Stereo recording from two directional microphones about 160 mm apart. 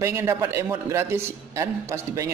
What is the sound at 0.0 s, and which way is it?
Speech, 20° right (ahead or behind).